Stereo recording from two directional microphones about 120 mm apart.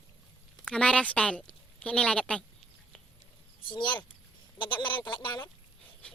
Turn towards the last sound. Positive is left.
turn(degrees=40)  # may be behind; listen again after turning